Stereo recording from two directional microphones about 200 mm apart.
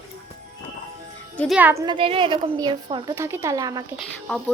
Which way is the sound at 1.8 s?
25° right (ahead or behind).